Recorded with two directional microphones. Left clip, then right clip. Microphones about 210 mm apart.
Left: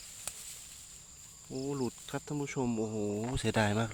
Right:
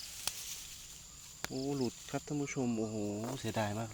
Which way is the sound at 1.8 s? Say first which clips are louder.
Left 1 dB; 15° left (ahead or behind).